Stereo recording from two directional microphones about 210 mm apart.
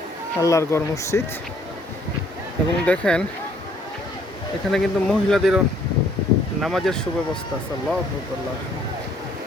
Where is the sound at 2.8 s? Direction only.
5° left (ahead or behind).